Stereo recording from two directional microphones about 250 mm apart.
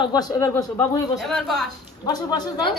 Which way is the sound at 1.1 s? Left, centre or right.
Centre.